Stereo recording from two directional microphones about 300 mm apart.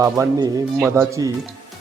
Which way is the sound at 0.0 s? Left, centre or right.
Centre.